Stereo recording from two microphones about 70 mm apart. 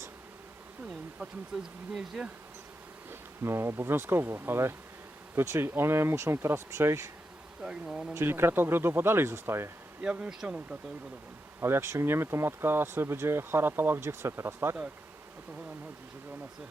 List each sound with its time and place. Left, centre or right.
1.5 s speech: centre
3.1 s speech: right
7.6 s speech: centre
8.1 s speech: right
10.0 s speech: centre
11.6 s speech: right